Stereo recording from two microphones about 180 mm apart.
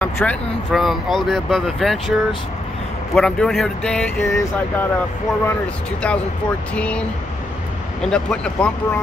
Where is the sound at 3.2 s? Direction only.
Centre (ahead or behind).